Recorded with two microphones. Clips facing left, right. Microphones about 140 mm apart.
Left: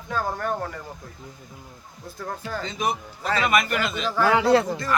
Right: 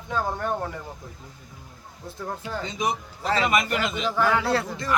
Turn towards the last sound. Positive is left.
turn(degrees=20)  # may be behind; listen again after turning